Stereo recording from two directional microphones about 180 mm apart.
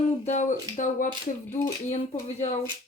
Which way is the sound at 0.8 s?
45° left (ahead or behind).